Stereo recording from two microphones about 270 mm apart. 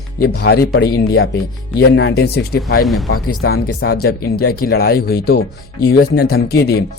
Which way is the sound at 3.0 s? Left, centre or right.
Left.